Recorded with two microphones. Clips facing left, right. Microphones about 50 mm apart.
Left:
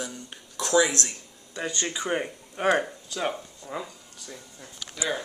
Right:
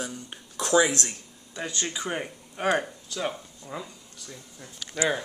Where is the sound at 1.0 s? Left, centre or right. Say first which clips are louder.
Even; centre.